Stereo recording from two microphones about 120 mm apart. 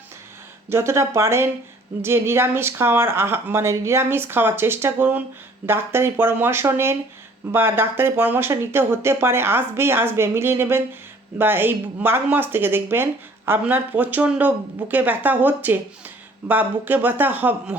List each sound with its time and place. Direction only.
0.7 s speech: 20° right (ahead or behind)